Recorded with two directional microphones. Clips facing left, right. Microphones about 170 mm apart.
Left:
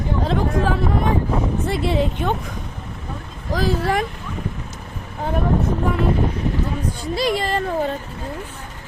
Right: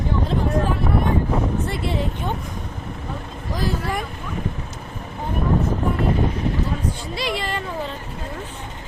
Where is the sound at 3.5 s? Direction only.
90° left.